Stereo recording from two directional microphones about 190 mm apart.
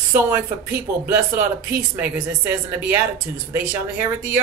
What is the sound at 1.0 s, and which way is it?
Speech, 10° right (ahead or behind).